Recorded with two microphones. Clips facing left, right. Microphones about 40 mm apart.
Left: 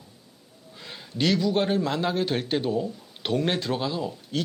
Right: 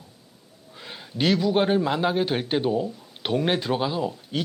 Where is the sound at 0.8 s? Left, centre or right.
Centre.